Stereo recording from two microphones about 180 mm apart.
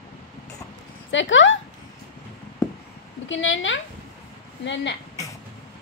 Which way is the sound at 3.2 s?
90° left.